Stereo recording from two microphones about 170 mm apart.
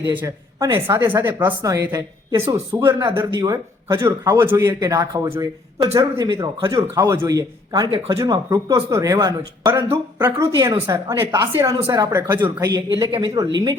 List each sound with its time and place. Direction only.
0.1 s a woman's voice: 15° right (ahead or behind)
7.7 s speech: 35° right (ahead or behind)
8.1 s a woman's voice: 20° right (ahead or behind)